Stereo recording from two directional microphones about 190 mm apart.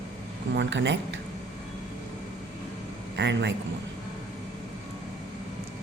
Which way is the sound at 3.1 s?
65° right (ahead or behind).